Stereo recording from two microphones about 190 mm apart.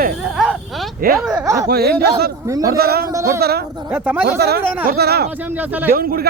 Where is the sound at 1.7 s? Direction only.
55° right (ahead or behind).